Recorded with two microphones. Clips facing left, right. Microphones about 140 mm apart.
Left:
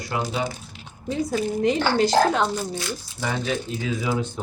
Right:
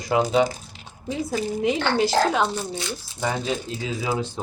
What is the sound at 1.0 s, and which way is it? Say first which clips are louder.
Speech: left 2 dB; 10° right (ahead or behind).